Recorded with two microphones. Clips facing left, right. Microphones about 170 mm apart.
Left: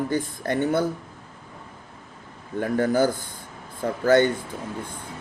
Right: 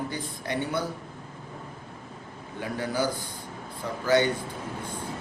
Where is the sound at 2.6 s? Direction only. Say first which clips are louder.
Left 7 dB; 50° left (ahead or behind).